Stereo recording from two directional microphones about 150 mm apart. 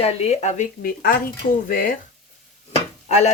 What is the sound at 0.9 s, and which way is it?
Speech, 75° left (ahead or behind).